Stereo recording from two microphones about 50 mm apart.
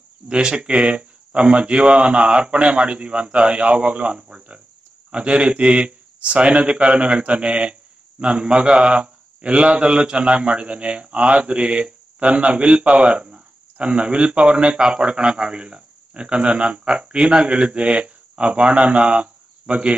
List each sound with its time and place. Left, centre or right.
0.3 s a man's voice: centre